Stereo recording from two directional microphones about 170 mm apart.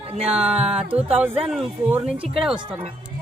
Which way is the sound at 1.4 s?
5° right (ahead or behind).